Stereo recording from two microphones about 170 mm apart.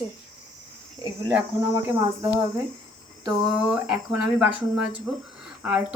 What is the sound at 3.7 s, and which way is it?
Speech, 5° right (ahead or behind).